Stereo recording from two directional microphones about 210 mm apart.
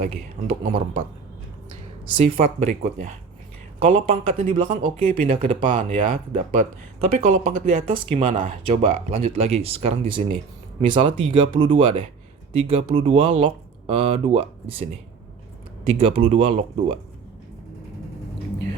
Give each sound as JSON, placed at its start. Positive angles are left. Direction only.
{"t": 0.0, "sound": "speech", "side_deg": -35}
{"t": 2.1, "sound": "speech", "side_deg": -30}
{"t": 6.3, "sound": "speech", "side_deg": -35}
{"t": 15.9, "sound": "speech", "side_deg": -25}